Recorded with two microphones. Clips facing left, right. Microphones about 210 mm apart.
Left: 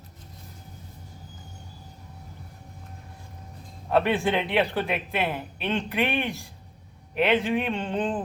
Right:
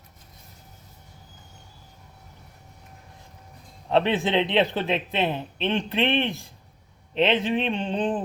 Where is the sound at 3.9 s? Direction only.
20° right (ahead or behind).